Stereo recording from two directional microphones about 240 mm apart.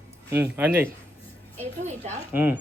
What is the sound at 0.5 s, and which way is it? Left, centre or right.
Speech, centre.